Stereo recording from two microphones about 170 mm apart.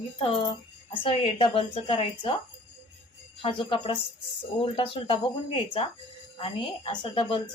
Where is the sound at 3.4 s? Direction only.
30° left (ahead or behind).